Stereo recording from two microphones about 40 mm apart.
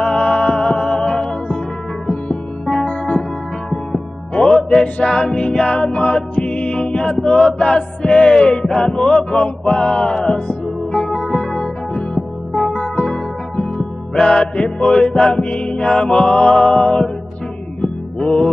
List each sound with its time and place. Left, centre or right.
0.0 s music: centre
2.8 s music: left
4.3 s music: left
11.1 s music: centre
12.5 s music: left
13.0 s music: left